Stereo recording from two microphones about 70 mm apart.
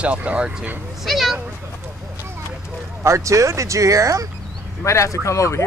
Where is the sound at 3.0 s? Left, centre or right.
Right.